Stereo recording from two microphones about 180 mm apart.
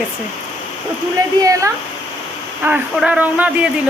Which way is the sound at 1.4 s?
20° right (ahead or behind).